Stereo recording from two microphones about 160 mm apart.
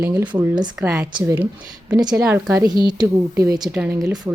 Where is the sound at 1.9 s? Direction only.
25° right (ahead or behind).